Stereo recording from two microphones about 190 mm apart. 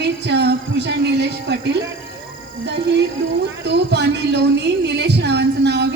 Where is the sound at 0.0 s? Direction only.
65° right (ahead or behind).